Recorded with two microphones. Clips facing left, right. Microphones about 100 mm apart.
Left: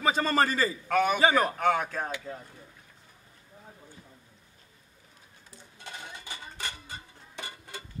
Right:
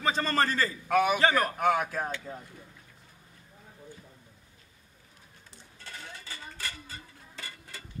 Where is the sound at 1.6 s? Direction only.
10° right (ahead or behind).